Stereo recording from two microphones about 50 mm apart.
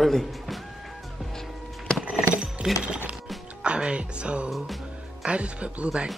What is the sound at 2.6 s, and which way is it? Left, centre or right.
Speech, centre.